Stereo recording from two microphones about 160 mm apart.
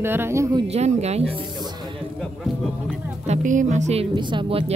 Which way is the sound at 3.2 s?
50° right (ahead or behind).